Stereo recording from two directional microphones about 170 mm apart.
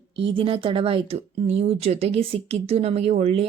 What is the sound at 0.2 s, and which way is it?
Speech, 30° right (ahead or behind).